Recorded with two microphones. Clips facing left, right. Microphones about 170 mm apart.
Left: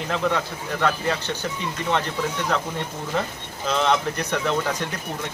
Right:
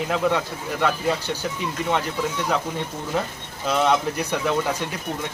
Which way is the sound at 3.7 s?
5° right (ahead or behind).